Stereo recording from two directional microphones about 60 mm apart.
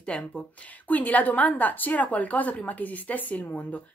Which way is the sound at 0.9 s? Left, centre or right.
Left.